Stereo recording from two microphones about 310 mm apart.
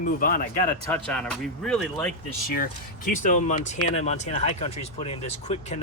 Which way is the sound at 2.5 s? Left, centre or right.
Left.